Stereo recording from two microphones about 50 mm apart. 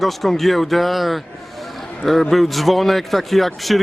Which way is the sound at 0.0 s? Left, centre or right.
Centre.